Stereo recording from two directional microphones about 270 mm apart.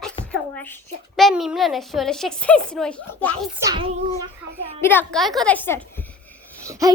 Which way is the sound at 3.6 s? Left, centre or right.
Centre.